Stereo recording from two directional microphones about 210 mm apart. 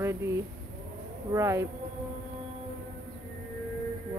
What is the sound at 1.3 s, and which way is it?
Speech, 15° right (ahead or behind).